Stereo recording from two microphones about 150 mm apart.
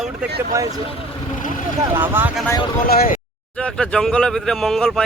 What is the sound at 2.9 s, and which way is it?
Speech, 85° left.